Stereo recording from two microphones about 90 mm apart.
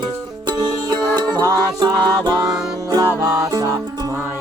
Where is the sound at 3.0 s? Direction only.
35° right (ahead or behind).